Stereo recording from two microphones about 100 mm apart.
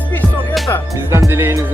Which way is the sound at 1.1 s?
25° right (ahead or behind).